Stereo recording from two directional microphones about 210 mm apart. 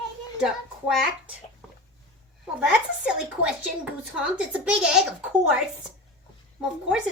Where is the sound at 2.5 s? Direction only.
5° right (ahead or behind).